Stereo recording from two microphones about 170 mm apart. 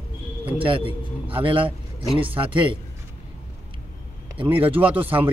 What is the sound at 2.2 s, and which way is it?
Speech, 10° right (ahead or behind).